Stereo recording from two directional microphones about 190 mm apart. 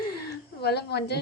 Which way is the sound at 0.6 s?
60° left (ahead or behind).